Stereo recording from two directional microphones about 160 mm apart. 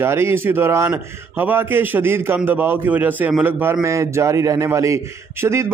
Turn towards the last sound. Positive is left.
turn(degrees=-20)  # may be behind; listen again after turning